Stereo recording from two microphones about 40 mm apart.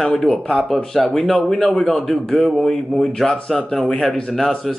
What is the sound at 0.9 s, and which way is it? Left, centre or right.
A man's voice, centre.